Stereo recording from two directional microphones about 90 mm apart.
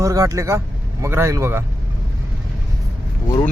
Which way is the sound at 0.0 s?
35° right (ahead or behind).